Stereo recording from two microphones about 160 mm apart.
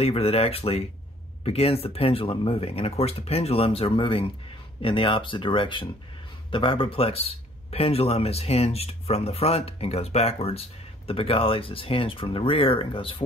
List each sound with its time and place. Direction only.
0.0 s speech: 40° left (ahead or behind)